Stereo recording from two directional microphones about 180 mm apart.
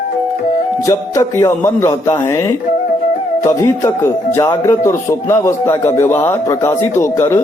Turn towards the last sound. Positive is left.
turn(degrees=15)  # may be behind; listen again after turning